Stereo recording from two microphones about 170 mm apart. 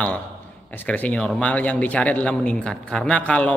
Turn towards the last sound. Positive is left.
turn(degrees=5)  # may be behind; listen again after turning